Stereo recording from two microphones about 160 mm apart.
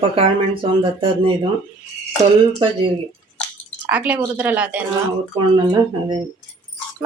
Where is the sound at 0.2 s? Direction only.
35° right (ahead or behind).